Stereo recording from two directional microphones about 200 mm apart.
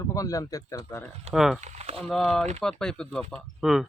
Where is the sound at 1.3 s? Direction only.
Centre (ahead or behind).